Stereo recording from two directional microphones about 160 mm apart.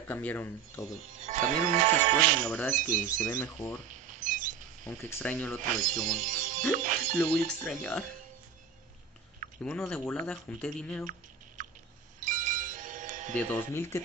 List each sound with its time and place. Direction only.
0.1 s speech: 10° left (ahead or behind)
1.2 s speech: 50° right (ahead or behind)
2.4 s speech: 10° left (ahead or behind)
3.9 s a sound: 55° right (ahead or behind)
4.8 s speech: 10° left (ahead or behind)
5.6 s speech: 55° right (ahead or behind)
7.2 s speech: 5° left (ahead or behind)
9.6 s speech: 5° left (ahead or behind)
11.6 s a sound: 55° right (ahead or behind)
12.2 s music: 55° right (ahead or behind)
13.5 s speech: 15° left (ahead or behind)